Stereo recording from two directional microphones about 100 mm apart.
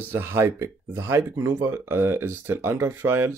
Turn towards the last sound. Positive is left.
turn(degrees=-20)  # may be behind; listen again after turning